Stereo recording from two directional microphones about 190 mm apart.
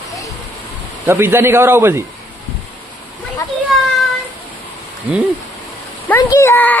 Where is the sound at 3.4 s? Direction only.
15° left (ahead or behind).